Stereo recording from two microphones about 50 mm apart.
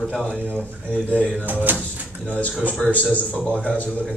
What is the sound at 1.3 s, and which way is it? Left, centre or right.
Speech, right.